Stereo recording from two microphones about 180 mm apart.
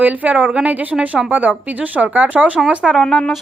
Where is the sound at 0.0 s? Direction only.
10° right (ahead or behind).